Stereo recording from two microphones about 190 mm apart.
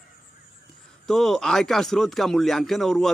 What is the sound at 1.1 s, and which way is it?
Speech, 5° left (ahead or behind).